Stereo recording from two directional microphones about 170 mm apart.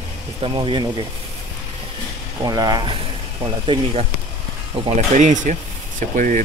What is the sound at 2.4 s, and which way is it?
Speech, 25° right (ahead or behind).